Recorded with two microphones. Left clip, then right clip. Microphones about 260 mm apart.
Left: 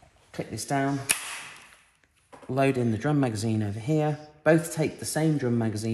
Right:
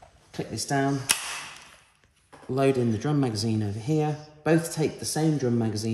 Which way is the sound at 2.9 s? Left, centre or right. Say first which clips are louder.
Left 1 dB; centre.